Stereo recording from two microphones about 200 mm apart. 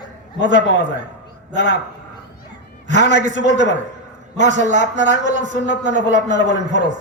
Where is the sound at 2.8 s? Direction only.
40° right (ahead or behind).